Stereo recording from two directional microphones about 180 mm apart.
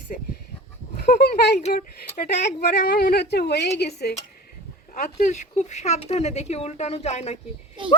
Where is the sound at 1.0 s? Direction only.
60° left (ahead or behind).